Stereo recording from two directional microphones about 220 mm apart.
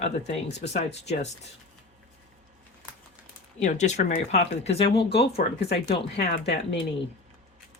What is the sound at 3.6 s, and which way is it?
Speech, 35° left (ahead or behind).